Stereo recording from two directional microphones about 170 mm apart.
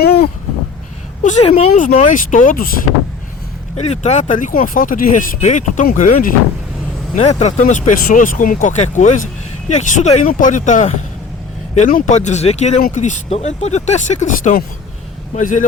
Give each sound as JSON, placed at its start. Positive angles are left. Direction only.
{"t": 0.0, "sound": "a sound", "side_deg": 65}
{"t": 1.2, "sound": "a woman's voice", "side_deg": 45}
{"t": 3.8, "sound": "speech", "side_deg": 40}
{"t": 7.2, "sound": "speech", "side_deg": 40}